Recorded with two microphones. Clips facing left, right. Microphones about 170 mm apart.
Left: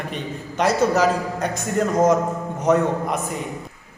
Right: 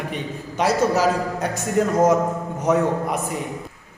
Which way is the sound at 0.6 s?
5° right (ahead or behind).